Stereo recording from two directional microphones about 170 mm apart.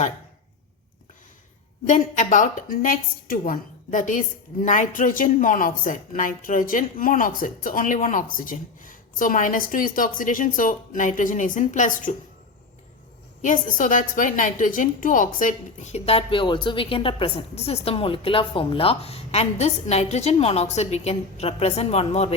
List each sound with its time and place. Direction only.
1.9 s speech: 45° left (ahead or behind)
13.4 s a woman's voice: 50° left (ahead or behind)